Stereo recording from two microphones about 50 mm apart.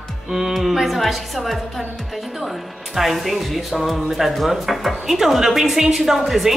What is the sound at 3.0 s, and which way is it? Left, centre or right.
Speech, centre.